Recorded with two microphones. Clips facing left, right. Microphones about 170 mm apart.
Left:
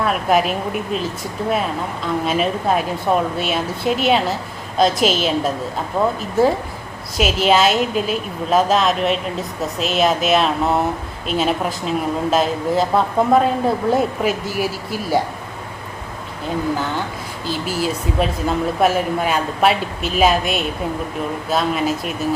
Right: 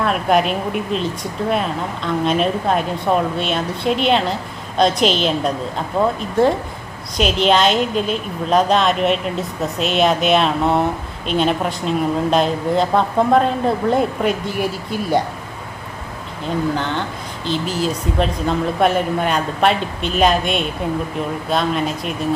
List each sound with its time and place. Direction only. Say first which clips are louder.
0.0 s speech: right 1 dB; centre (ahead or behind)
17.4 s speech: right 1 dB; 5° left (ahead or behind)